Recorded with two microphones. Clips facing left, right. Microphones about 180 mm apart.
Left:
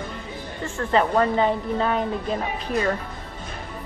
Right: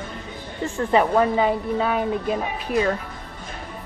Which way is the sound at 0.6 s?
15° right (ahead or behind).